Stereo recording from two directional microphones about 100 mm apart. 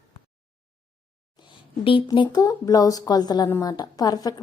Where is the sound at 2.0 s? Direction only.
50° left (ahead or behind).